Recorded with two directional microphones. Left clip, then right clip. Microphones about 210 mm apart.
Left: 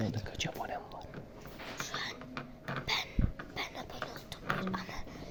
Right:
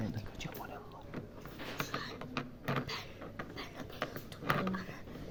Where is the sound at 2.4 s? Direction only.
45° right (ahead or behind).